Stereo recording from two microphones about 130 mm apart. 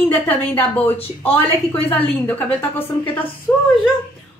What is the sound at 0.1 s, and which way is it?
A woman's voice, 15° left (ahead or behind).